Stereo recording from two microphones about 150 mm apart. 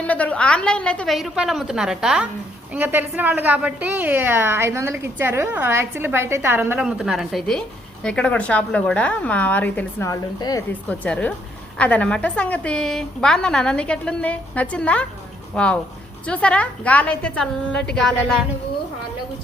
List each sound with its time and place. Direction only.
0.1 s a woman's voice: 10° left (ahead or behind); by 6.8 s 15° right (ahead or behind)
6.8 s a woman's voice: 5° right (ahead or behind); by 10.6 s 25° left (ahead or behind)
10.7 s a woman's voice: 10° left (ahead or behind)